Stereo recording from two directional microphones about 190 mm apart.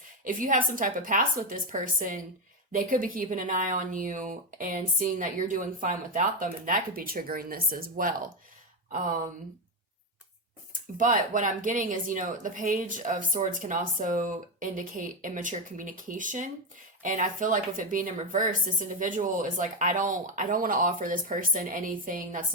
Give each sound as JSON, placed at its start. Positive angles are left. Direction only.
{"t": 0.3, "sound": "speech", "side_deg": -45}
{"t": 10.9, "sound": "speech", "side_deg": -45}